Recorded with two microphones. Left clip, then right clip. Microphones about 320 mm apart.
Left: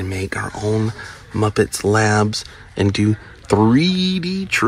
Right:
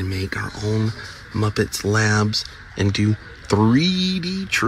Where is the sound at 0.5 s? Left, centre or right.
Left.